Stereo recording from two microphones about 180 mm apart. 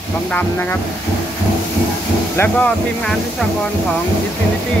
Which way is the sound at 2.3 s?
10° left (ahead or behind).